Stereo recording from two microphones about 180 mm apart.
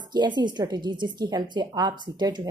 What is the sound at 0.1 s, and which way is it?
A woman's voice, 25° right (ahead or behind).